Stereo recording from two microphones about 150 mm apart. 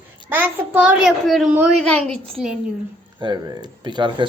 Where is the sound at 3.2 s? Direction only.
30° right (ahead or behind).